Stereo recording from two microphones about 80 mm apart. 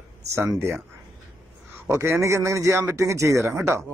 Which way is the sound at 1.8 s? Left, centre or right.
Right.